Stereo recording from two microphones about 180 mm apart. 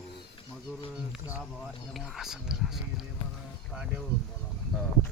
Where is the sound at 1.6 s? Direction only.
Centre (ahead or behind).